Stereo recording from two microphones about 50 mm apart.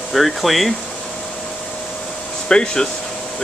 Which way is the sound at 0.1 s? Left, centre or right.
Centre.